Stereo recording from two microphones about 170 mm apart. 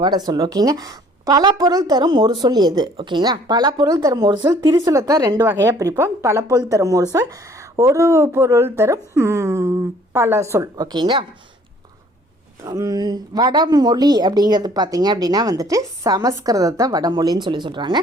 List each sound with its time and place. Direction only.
0.0 s a woman's voice: 25° right (ahead or behind)
12.6 s a woman's voice: 20° right (ahead or behind)